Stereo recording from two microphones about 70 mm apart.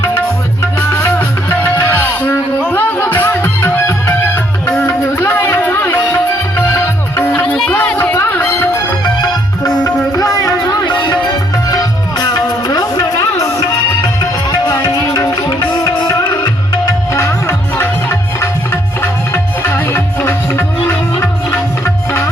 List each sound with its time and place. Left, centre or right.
0.8 s music: left
1.5 s music: left
3.2 s music: left
7.3 s music: centre
9.2 s music: left
10.1 s music: left
13.1 s music: left
17.2 s music: left